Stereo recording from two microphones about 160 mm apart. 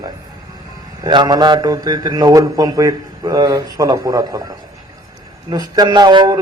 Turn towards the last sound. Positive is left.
turn(degrees=-25)  # may be behind; listen again after turning